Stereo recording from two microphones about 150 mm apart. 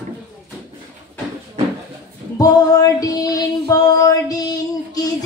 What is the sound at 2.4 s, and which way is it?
Female singing, 25° left (ahead or behind).